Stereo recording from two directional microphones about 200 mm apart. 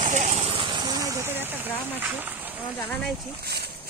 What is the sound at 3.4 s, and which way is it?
Speech, 50° right (ahead or behind).